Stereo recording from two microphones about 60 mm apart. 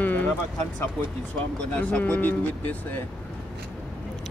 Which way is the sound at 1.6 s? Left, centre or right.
Centre.